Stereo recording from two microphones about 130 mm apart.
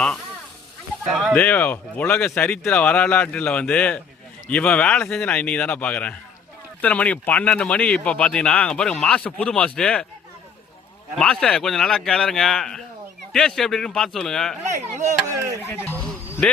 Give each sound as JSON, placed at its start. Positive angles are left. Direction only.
{"t": 1.1, "sound": "a man's voice", "side_deg": 0}
{"t": 1.4, "sound": "speech", "side_deg": 15}
{"t": 11.2, "sound": "a man's voice", "side_deg": 5}
{"t": 15.0, "sound": "speech", "side_deg": -20}
{"t": 15.7, "sound": "speech", "side_deg": 15}